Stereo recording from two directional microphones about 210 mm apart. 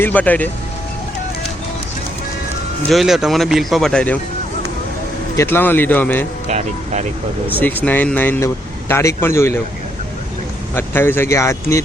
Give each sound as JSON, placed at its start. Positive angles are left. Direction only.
{"t": 0.0, "sound": "speech", "side_deg": 5}
{"t": 2.9, "sound": "speech", "side_deg": 0}
{"t": 5.4, "sound": "speech", "side_deg": 10}
{"t": 6.5, "sound": "speech", "side_deg": -35}
{"t": 7.6, "sound": "speech", "side_deg": 10}
{"t": 10.8, "sound": "speech", "side_deg": 10}